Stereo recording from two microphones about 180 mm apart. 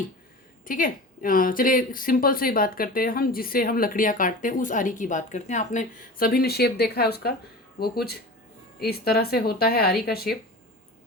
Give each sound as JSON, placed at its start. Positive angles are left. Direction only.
{"t": 0.6, "sound": "speech", "side_deg": 50}